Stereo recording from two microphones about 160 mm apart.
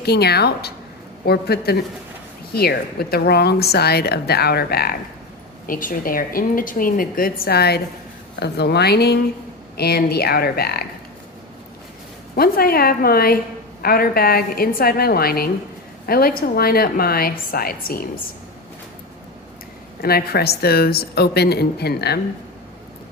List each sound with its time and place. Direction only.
0.0 s a woman's voice: 90° left; by 4.9 s 75° left (ahead or behind)
5.6 s a woman's voice: 60° left (ahead or behind); by 9.2 s 90° left
9.7 s a woman's voice: 75° left (ahead or behind)
12.4 s a woman's voice: 70° left (ahead or behind)
20.0 s a woman's voice: 70° left (ahead or behind)